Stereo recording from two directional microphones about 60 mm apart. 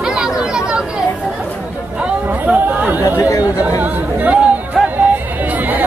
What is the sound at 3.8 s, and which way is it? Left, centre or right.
Speech, right.